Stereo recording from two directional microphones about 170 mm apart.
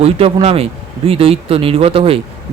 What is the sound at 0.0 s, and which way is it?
Speech, 35° right (ahead or behind).